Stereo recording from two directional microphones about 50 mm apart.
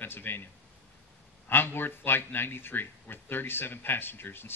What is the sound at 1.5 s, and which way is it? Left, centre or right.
Speech, left.